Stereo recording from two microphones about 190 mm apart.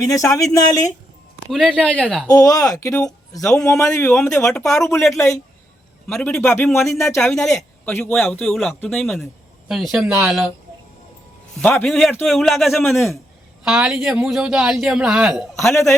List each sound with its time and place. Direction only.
0.1 s speech: 15° left (ahead or behind)
1.5 s a man's voice: 5° left (ahead or behind)
2.3 s speech: 15° left (ahead or behind)
6.1 s a man's voice: 5° left (ahead or behind)
6.7 s a man's voice: centre (ahead or behind)
6.9 s speech: 15° left (ahead or behind)
7.2 s a man's voice: centre (ahead or behind)
11.6 s a man's voice: centre (ahead or behind)
15.7 s speech: 15° left (ahead or behind)